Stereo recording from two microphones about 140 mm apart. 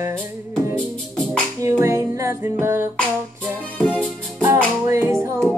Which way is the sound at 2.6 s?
20° right (ahead or behind).